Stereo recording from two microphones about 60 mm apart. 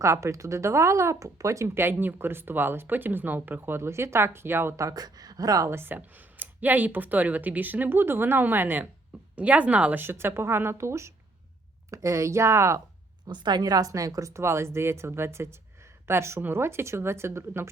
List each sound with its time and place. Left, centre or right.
0.0 s speech: right
1.7 s speech: right
4.8 s speech: right
5.6 s speech: right
6.4 s speech: right
10.0 s speech: right
13.2 s speech: right